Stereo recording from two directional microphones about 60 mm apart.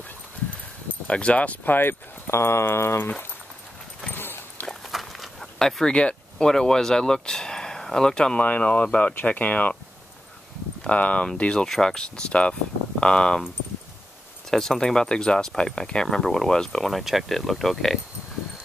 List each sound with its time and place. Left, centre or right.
1.0 s speech: centre; by 3.1 s left
4.1 s dog: left
4.9 s a sound: centre
6.3 s speech: centre
8.4 s speech: left
10.8 s speech: left
14.5 s speech: centre